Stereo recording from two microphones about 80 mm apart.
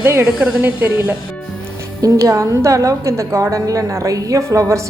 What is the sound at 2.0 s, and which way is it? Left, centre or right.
A woman's voice, right.